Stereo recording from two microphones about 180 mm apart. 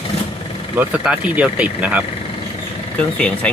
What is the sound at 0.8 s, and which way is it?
Speech, 10° right (ahead or behind).